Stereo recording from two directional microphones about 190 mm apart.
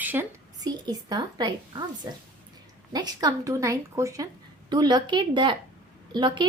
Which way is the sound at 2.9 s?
20° right (ahead or behind).